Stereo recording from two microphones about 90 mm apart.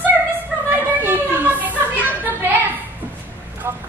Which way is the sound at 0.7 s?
25° right (ahead or behind).